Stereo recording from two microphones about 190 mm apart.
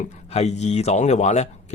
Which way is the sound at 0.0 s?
35° left (ahead or behind).